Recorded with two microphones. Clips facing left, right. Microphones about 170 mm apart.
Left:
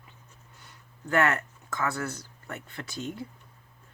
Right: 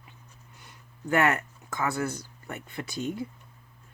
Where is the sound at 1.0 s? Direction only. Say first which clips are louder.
Right 1 dB; 15° right (ahead or behind).